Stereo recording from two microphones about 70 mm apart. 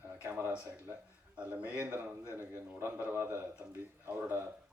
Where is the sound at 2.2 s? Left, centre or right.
Right.